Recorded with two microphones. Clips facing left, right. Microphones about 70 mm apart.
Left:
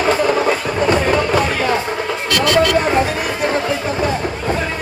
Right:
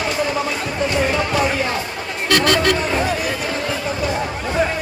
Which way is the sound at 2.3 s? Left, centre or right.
Right.